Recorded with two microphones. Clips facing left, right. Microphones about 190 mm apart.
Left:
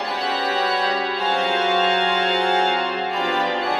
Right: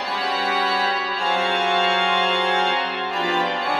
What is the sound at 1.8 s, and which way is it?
Music, 40° left (ahead or behind).